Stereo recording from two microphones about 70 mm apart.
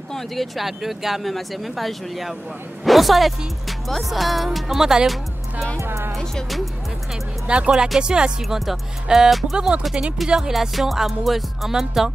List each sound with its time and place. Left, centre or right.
0.1 s a woman's voice: centre
5.8 s speech: right
6.1 s speech: centre
7.4 s speech: centre